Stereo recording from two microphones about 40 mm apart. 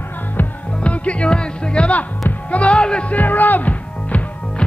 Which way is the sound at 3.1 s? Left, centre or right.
Left.